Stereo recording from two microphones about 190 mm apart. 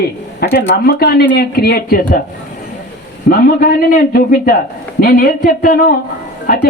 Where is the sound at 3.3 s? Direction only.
50° left (ahead or behind).